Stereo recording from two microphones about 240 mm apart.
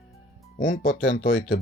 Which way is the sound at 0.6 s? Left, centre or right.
Left.